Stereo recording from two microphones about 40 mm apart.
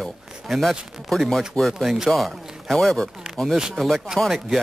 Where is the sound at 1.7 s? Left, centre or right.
Centre.